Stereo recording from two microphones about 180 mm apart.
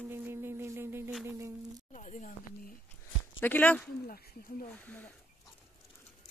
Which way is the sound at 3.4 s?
10° left (ahead or behind).